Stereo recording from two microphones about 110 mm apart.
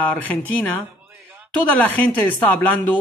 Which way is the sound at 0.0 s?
15° left (ahead or behind).